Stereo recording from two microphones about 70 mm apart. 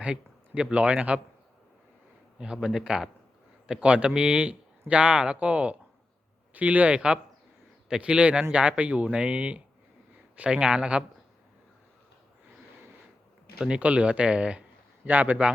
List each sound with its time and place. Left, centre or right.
0.0 s speech: centre
2.4 s speech: centre
13.6 s speech: centre